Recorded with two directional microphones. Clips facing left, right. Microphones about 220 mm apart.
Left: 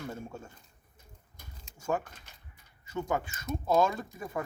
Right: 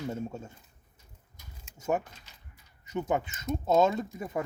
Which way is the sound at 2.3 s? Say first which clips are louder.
Left 1 dB; 55° left (ahead or behind).